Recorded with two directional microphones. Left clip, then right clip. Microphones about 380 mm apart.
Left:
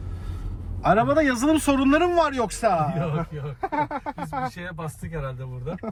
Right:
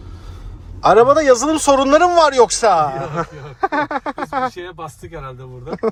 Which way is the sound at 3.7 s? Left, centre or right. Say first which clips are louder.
Right 7 dB; right.